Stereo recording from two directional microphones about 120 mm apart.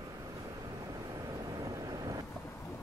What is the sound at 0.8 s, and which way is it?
Vehicle, 30° right (ahead or behind).